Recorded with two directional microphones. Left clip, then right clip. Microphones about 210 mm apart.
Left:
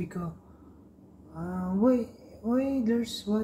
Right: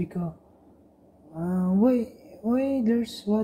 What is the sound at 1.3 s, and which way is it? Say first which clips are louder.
Speech: right 5 dB; 35° right (ahead or behind).